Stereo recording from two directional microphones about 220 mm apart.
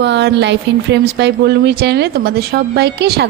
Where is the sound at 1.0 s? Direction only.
50° right (ahead or behind).